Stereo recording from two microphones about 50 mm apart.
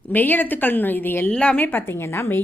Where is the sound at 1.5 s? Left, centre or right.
Left.